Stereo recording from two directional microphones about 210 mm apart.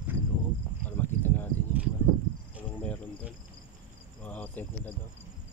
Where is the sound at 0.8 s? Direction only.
10° left (ahead or behind).